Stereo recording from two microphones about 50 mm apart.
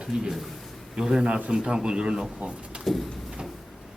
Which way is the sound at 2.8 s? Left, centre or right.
Centre.